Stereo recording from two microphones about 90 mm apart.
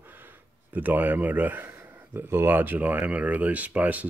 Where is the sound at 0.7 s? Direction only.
20° right (ahead or behind).